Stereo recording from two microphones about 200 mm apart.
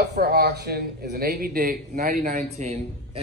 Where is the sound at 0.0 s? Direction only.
55° right (ahead or behind).